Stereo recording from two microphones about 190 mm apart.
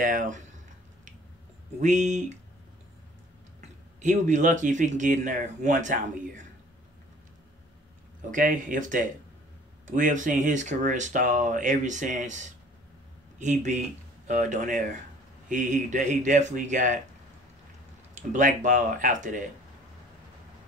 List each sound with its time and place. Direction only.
0.0 s speech: 40° right (ahead or behind)
1.8 s speech: 40° right (ahead or behind)
4.0 s speech: 40° right (ahead or behind)
8.3 s speech: 45° right (ahead or behind)
18.1 s speech: 40° right (ahead or behind)